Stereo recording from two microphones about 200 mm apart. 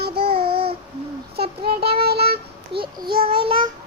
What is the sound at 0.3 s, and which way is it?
Child singing, 25° right (ahead or behind).